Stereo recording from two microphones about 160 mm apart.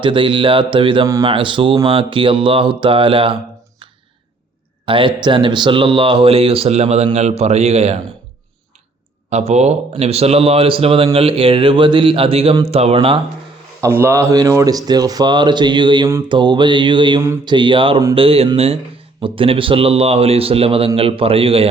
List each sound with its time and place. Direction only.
0.0 s speech: 30° right (ahead or behind)
4.9 s speech: 30° right (ahead or behind)
9.5 s speech: 45° right (ahead or behind)
13.8 s speech: 15° right (ahead or behind); by 21.7 s 35° right (ahead or behind)